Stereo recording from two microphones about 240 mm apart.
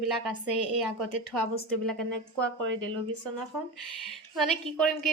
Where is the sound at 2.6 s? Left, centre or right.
Right.